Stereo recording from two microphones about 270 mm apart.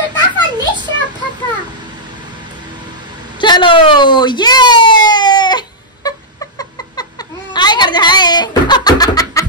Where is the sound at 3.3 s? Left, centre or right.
Centre.